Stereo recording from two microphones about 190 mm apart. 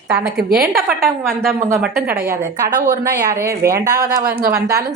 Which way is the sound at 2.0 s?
50° right (ahead or behind).